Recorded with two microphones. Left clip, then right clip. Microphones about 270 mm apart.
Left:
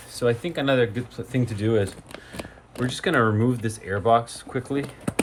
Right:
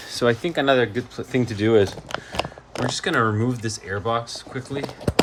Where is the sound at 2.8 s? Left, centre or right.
Centre.